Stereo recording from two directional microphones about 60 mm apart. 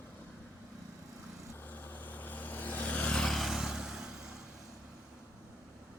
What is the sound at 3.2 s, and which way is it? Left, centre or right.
Vehicle, centre.